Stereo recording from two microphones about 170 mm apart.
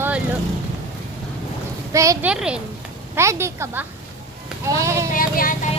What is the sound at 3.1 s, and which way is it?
Speech, 15° right (ahead or behind).